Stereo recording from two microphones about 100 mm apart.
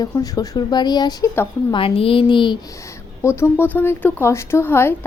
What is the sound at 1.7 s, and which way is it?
Speech, 65° left (ahead or behind).